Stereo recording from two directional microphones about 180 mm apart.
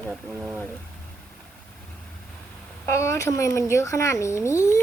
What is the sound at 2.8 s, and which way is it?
Speech, 15° left (ahead or behind).